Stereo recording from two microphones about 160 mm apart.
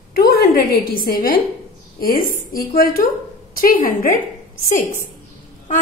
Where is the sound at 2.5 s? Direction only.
60° left (ahead or behind).